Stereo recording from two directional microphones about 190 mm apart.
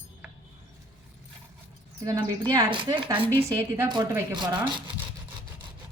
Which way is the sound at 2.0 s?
20° right (ahead or behind).